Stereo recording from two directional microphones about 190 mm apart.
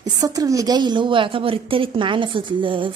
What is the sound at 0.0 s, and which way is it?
A woman's voice, 20° right (ahead or behind).